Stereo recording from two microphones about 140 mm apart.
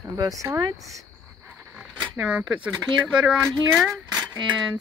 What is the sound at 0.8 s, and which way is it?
Cricket, centre (ahead or behind).